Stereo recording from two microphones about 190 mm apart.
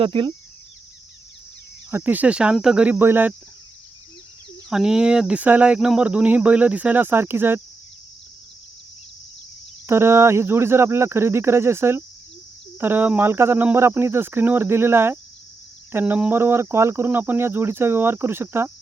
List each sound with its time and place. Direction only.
0.0 s speech: 25° right (ahead or behind)
1.9 s speech: 10° right (ahead or behind)
4.7 s speech: 5° right (ahead or behind)
9.8 s speech: 15° right (ahead or behind)